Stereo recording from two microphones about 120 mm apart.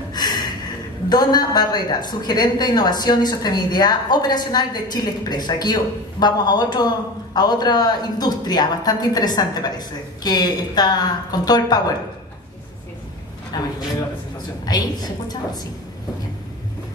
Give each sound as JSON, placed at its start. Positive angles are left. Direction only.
{"t": 0.1, "sound": "a sound", "side_deg": 35}
{"t": 1.0, "sound": "a woman's voice", "side_deg": 35}
{"t": 13.5, "sound": "a woman's voice", "side_deg": 35}